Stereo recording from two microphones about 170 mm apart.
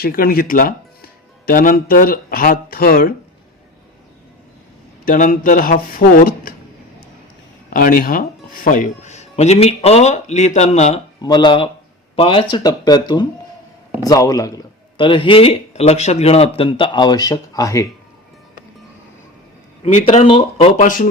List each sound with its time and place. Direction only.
0.0 s speech: 60° left (ahead or behind)
5.0 s speech: 55° left (ahead or behind)
7.7 s speech: 55° left (ahead or behind)
11.2 s a man's voice: 25° left (ahead or behind)
19.8 s speech: 40° left (ahead or behind)